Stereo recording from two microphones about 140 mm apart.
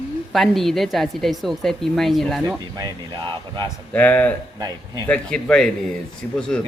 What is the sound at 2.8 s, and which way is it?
Speech, 30° right (ahead or behind).